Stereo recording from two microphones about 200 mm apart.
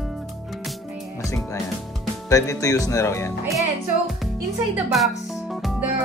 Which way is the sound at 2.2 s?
15° left (ahead or behind).